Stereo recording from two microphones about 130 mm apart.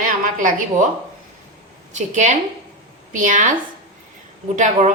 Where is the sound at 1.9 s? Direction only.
65° right (ahead or behind).